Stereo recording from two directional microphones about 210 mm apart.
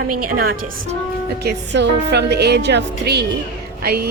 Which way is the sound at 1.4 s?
55° right (ahead or behind).